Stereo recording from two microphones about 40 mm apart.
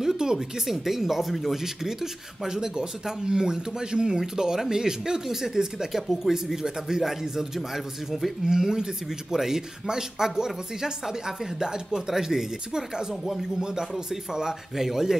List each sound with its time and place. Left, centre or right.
0.0 s a sound: centre
0.7 s speech: centre
1.6 s speech: centre
8.5 s speech: centre
13.2 s speech: centre
13.6 s speech: centre